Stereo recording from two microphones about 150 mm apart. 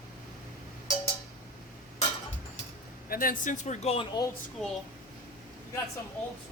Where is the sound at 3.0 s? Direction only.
75° left (ahead or behind); by 4.1 s 45° left (ahead or behind).